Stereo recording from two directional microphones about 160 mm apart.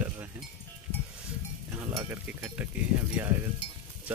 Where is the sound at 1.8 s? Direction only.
20° right (ahead or behind).